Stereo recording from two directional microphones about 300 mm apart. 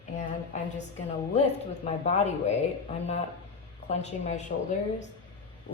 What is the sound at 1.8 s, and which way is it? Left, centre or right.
Speech, left.